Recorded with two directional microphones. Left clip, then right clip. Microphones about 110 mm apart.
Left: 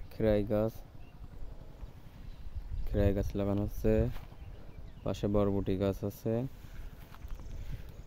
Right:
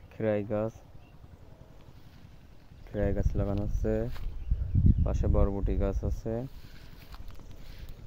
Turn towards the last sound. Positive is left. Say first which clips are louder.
# left 1 dB
turn(degrees=35)  # may be behind; listen again after turning